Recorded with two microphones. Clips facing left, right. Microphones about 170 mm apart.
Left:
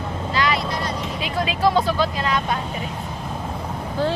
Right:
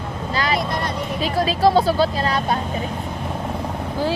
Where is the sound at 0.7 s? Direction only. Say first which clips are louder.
Right 2 dB; 55° right (ahead or behind).